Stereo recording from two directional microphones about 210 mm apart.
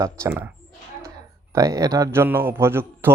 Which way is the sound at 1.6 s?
15° right (ahead or behind).